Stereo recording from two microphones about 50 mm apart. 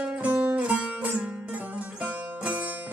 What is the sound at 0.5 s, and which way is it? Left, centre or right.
Music, right.